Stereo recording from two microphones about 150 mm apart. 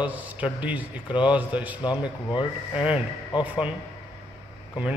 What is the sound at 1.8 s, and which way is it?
Speech, 30° left (ahead or behind).